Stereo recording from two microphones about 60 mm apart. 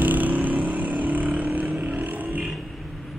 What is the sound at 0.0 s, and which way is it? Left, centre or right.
Vehicle, right.